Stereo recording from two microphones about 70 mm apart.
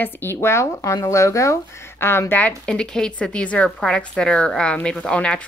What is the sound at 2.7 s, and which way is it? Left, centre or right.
A woman's voice, centre.